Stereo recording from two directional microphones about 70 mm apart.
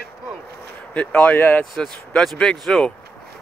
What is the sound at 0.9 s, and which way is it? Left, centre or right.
Speech, left.